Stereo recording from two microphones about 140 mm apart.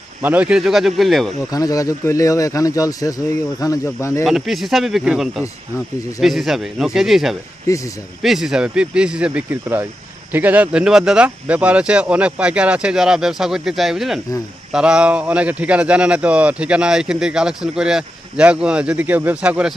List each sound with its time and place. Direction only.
0.2 s speech: 10° right (ahead or behind)
1.5 s speech: 25° left (ahead or behind)
4.3 s speech: centre (ahead or behind)
7.7 s speech: 25° left (ahead or behind)
8.2 s speech: 5° right (ahead or behind)